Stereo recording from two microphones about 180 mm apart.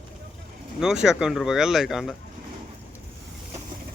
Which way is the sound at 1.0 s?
Centre (ahead or behind).